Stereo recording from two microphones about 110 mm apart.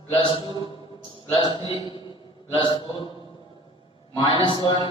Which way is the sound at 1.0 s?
45° left (ahead or behind).